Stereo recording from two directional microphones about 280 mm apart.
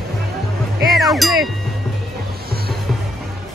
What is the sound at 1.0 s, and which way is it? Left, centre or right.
Music, centre.